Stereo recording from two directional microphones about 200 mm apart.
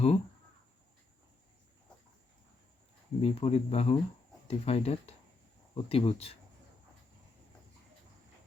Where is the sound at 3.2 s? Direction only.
30° left (ahead or behind).